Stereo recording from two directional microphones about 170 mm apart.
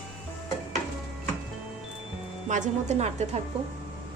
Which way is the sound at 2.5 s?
45° right (ahead or behind).